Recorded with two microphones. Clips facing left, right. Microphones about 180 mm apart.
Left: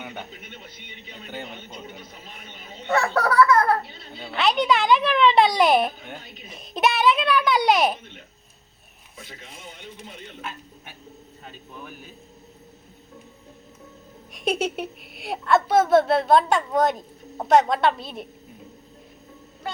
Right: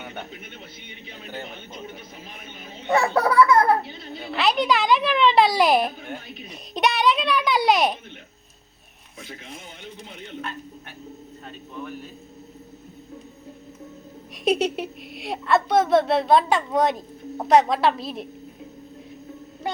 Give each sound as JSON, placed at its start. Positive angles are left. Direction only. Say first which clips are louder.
{"t": 0.0, "sound": "a sound", "louder": "even", "side_deg": 0}
{"t": 2.9, "sound": "a child's voice", "louder": "right 2 dB", "side_deg": -15}
{"t": 4.3, "sound": "a woman's voice", "louder": "even", "side_deg": 0}
{"t": 11.4, "sound": "a woman's voice", "louder": "right 5 dB", "side_deg": 5}
{"t": 14.4, "sound": "a woman's voice", "louder": "right 3 dB", "side_deg": 0}